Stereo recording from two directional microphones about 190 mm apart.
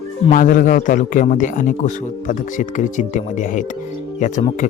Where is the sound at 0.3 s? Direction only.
45° left (ahead or behind).